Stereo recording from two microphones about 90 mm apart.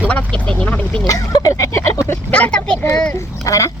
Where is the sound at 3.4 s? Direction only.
35° left (ahead or behind).